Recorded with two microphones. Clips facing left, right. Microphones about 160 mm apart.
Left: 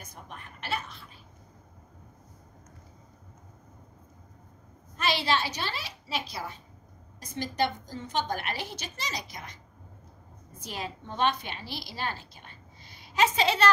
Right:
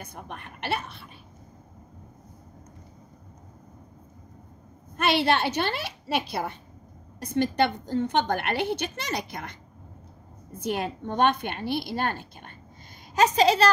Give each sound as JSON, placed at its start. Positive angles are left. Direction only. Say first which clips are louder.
{"t": 0.0, "sound": "a woman's voice", "louder": "right 6 dB", "side_deg": -65}
{"t": 4.9, "sound": "a woman's voice", "louder": "right 5 dB", "side_deg": -60}
{"t": 10.6, "sound": "a woman's voice", "louder": "right 9 dB", "side_deg": -60}
{"t": 13.1, "sound": "a woman's voice", "louder": "right 5 dB", "side_deg": -40}